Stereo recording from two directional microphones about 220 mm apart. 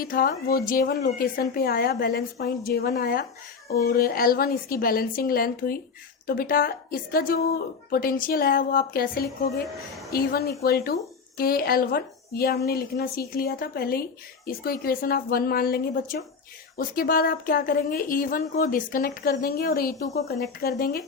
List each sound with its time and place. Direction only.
0.0 s a woman's voice: 40° left (ahead or behind)
9.6 s a woman's voice: centre (ahead or behind)
10.1 s a woman's voice: 45° left (ahead or behind)